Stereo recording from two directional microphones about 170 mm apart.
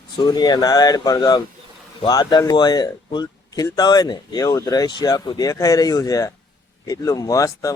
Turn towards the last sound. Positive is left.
turn(degrees=20)  # may be behind; listen again after turning